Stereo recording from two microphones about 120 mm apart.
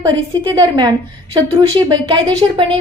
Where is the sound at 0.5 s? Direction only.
35° right (ahead or behind).